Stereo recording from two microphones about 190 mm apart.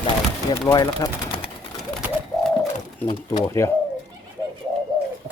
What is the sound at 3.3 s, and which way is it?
Speech, 15° left (ahead or behind).